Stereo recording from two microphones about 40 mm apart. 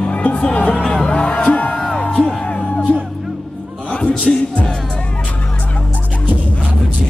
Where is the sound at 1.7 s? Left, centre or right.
Centre.